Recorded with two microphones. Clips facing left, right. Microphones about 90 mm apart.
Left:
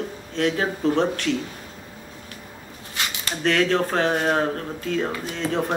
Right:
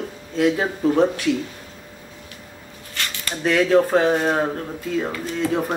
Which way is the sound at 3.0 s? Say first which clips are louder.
Even; 15° left (ahead or behind).